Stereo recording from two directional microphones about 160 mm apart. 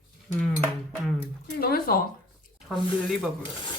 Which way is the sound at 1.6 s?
70° left (ahead or behind).